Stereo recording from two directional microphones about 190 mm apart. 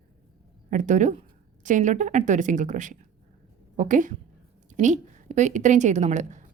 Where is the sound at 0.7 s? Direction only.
40° right (ahead or behind).